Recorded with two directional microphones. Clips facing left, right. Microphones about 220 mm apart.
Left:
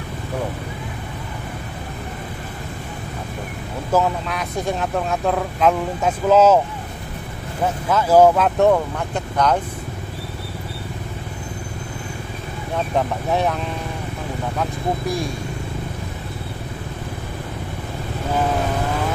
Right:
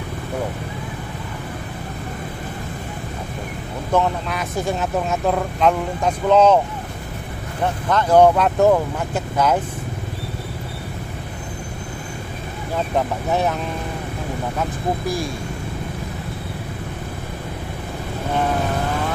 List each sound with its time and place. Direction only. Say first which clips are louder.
3.9 s speech: even; centre (ahead or behind)
7.6 s speech: even; 5° left (ahead or behind)
12.9 s speech: even; centre (ahead or behind)
14.6 s speech: left 1 dB; centre (ahead or behind)